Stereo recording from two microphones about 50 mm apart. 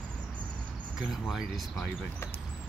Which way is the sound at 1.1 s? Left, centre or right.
Centre.